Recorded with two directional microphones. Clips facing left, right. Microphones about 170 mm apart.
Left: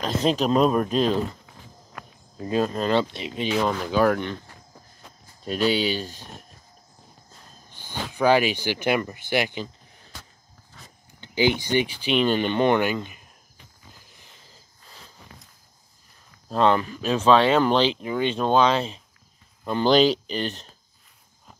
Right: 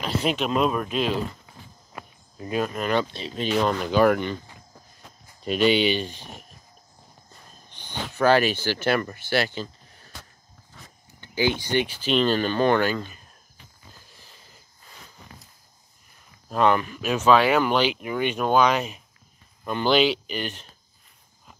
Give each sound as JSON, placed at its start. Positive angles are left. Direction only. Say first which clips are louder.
{"t": 0.0, "sound": "speech", "louder": "left 3 dB", "side_deg": 35}
{"t": 2.4, "sound": "speech", "louder": "left 3 dB", "side_deg": 30}
{"t": 3.5, "sound": "speech", "louder": "right 2 dB", "side_deg": 0}
{"t": 7.7, "sound": "speech", "louder": "left 1 dB", "side_deg": 10}
{"t": 11.1, "sound": "speech", "louder": "left 2 dB", "side_deg": 15}
{"t": 14.0, "sound": "a sound", "louder": "right 1 dB", "side_deg": 20}
{"t": 16.4, "sound": "speech", "louder": "left 1 dB", "side_deg": 30}